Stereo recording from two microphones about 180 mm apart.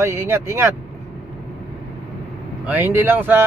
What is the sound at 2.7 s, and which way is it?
Speech, 10° right (ahead or behind).